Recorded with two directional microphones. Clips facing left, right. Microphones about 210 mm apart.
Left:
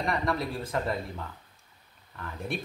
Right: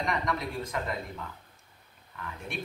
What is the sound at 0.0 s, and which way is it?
Speech, 30° left (ahead or behind).